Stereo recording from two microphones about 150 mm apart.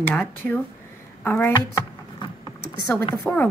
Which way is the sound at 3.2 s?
10° left (ahead or behind).